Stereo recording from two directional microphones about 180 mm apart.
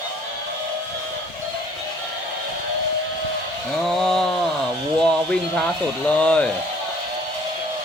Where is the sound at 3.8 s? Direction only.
Centre (ahead or behind).